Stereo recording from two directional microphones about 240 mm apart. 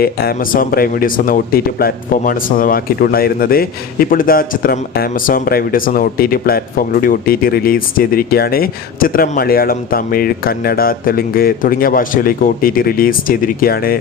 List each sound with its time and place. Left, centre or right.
0.0 s speech: left